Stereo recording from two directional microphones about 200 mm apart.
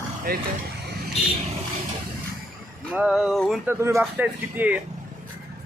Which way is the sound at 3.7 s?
15° right (ahead or behind).